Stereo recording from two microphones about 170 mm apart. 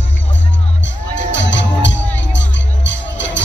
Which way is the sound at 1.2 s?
90° left.